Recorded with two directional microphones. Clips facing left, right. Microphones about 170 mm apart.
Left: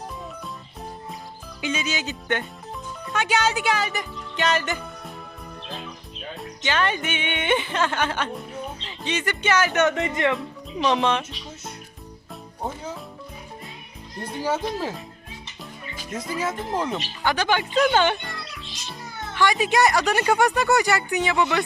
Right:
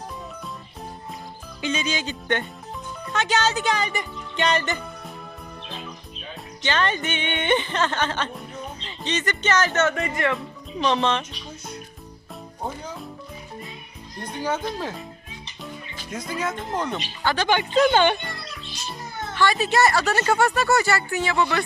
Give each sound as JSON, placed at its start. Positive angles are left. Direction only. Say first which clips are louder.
{"t": 1.6, "sound": "speech", "louder": "right 1 dB", "side_deg": 5}
{"t": 6.7, "sound": "speech", "louder": "even", "side_deg": 10}
{"t": 10.3, "sound": "music", "louder": "left 1 dB", "side_deg": 5}
{"t": 14.2, "sound": "a child's voice", "louder": "left 1 dB", "side_deg": 5}
{"t": 19.3, "sound": "speech", "louder": "even", "side_deg": 15}